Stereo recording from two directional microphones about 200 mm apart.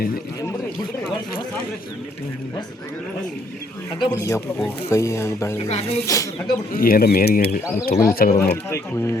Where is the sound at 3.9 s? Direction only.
20° left (ahead or behind).